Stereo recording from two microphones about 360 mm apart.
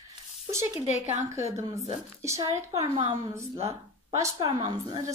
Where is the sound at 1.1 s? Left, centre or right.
Centre.